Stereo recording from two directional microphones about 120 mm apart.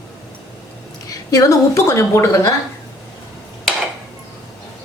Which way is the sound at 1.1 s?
30° left (ahead or behind).